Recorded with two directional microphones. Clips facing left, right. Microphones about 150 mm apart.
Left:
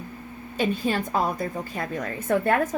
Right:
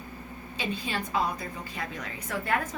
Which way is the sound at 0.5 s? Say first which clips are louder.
Left 8 dB; 50° left (ahead or behind).